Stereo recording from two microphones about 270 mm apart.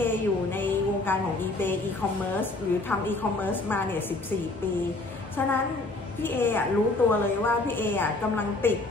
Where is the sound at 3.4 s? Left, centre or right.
Centre.